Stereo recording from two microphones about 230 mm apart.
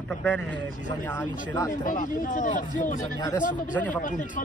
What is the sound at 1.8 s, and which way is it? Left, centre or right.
Speech, left.